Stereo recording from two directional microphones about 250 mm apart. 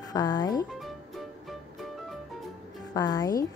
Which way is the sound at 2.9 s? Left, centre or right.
Centre.